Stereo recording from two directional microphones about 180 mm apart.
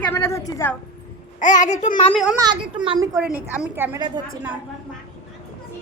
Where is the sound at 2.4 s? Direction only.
25° right (ahead or behind).